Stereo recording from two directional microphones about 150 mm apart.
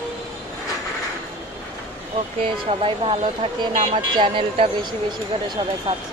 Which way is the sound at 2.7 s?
35° right (ahead or behind).